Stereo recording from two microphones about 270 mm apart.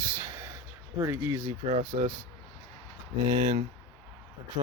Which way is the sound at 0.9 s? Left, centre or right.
Centre.